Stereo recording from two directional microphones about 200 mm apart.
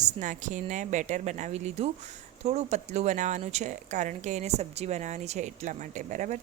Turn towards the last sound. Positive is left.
turn(degrees=-40)  # may be behind; listen again after turning